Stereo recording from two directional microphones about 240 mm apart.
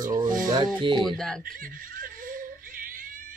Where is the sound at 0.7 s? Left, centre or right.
Centre.